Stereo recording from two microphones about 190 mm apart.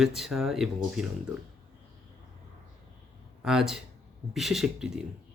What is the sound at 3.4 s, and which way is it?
Speech, centre (ahead or behind).